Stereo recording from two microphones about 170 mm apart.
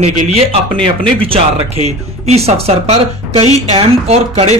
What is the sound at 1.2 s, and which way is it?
Speech, 35° right (ahead or behind).